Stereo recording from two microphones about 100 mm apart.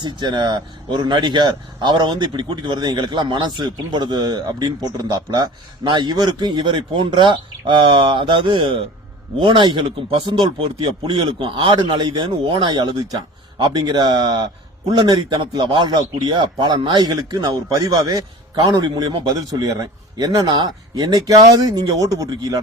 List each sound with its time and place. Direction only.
0.0 s a man's voice: 50° right (ahead or behind)